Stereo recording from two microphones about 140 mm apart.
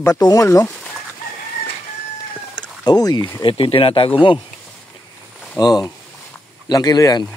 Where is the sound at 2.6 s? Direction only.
30° left (ahead or behind).